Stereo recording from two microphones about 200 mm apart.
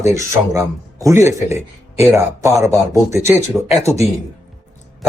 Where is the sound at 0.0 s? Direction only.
15° right (ahead or behind).